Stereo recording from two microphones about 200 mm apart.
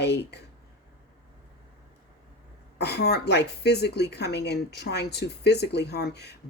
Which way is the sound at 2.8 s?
55° left (ahead or behind).